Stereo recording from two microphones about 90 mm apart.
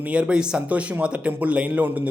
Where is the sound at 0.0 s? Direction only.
10° right (ahead or behind).